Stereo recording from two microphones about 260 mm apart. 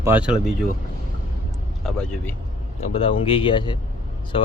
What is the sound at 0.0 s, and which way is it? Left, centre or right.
Speech, centre.